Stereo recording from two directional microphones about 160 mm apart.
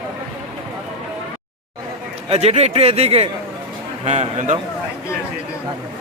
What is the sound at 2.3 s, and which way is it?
A man's voice, 40° right (ahead or behind).